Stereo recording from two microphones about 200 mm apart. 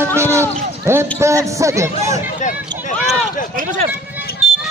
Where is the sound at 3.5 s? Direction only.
40° right (ahead or behind).